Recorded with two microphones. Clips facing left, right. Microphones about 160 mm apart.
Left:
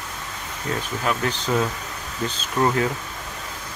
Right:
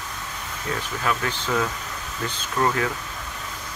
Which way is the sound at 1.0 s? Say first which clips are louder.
Left 1 dB; 20° left (ahead or behind).